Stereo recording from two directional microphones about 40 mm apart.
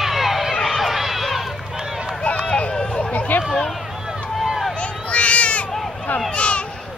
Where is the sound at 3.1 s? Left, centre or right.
Left.